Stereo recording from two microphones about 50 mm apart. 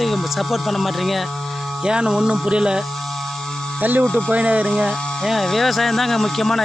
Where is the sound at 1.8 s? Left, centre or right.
Centre.